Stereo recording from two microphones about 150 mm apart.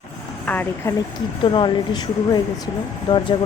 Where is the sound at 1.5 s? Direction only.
35° left (ahead or behind).